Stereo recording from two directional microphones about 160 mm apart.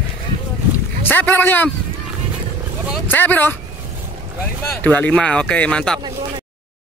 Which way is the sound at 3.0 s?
10° left (ahead or behind).